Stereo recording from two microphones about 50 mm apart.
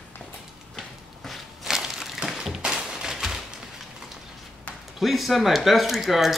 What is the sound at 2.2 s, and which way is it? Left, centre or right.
Tap, centre.